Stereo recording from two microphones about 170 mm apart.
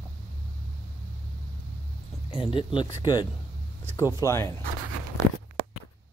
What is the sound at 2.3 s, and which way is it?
Speech, 30° left (ahead or behind).